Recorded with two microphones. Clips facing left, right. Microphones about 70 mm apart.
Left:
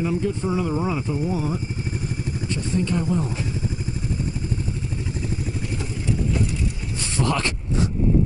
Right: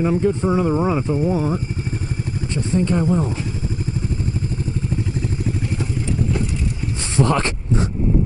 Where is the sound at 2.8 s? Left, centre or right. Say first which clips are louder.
Right 5 dB; right.